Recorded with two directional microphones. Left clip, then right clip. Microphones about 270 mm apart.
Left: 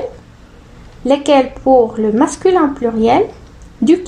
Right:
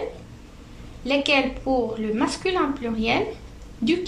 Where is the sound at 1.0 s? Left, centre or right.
Left.